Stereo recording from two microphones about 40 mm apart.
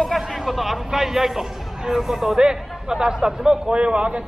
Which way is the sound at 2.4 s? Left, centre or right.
Centre.